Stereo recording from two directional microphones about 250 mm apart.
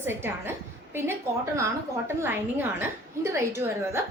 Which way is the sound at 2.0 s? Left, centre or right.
Centre.